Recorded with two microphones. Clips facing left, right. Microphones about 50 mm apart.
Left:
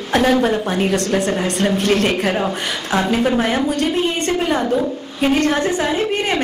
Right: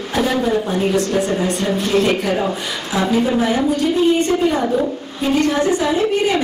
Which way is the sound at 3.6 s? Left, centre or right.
Left.